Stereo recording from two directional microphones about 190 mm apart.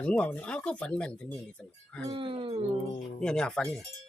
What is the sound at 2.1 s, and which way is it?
Speech, 25° right (ahead or behind).